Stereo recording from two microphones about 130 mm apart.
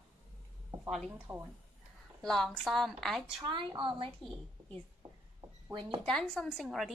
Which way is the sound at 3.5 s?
40° right (ahead or behind).